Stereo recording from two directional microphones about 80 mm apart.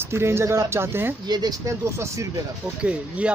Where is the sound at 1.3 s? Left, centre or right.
Right.